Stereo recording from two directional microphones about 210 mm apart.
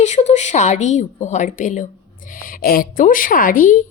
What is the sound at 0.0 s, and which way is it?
A woman's voice, 35° left (ahead or behind).